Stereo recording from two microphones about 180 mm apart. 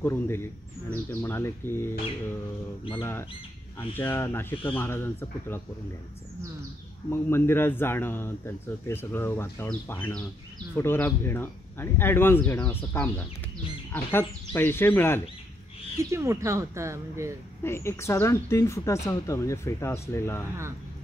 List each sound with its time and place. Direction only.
0.0 s a man's voice: 15° left (ahead or behind)
3.0 s a man's voice: 15° left (ahead or behind)
7.1 s a man's voice: 15° left (ahead or behind)
16.0 s speech: 15° right (ahead or behind)
17.6 s a man's voice: 15° left (ahead or behind)